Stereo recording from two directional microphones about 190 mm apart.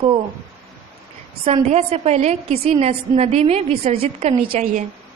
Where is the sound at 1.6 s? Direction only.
35° right (ahead or behind).